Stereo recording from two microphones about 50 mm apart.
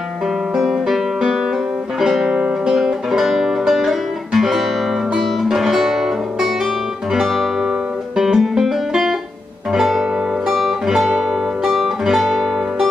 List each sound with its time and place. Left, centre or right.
0.6 s guitar: centre
2.0 s music: centre